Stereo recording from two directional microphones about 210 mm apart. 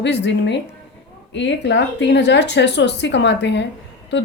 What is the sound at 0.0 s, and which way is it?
Speech, 55° left (ahead or behind).